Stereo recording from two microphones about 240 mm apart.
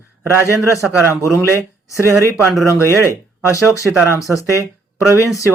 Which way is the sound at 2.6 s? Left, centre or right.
Centre.